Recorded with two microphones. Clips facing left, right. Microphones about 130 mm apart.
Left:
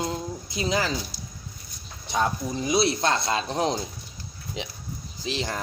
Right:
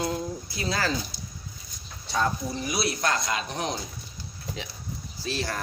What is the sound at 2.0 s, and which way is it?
Speech, 15° left (ahead or behind).